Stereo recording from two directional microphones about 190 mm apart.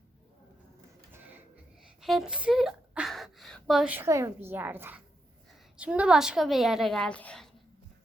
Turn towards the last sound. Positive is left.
turn(degrees=5)  # may be behind; listen again after turning